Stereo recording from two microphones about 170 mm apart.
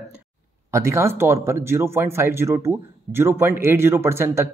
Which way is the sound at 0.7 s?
15° right (ahead or behind).